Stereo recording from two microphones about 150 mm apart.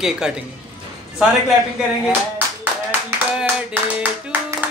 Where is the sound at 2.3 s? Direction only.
10° right (ahead or behind).